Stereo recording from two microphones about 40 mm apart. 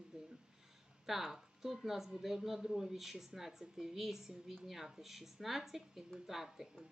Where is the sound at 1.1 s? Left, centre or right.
Centre.